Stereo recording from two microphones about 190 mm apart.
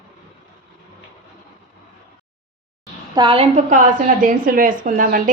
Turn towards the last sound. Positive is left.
turn(degrees=-45)  # may be behind; listen again after turning